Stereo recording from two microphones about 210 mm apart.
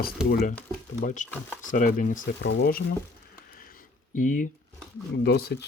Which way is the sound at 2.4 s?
55° left (ahead or behind).